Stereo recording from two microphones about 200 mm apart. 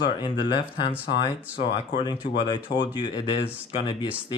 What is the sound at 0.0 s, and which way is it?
Speech, 25° left (ahead or behind).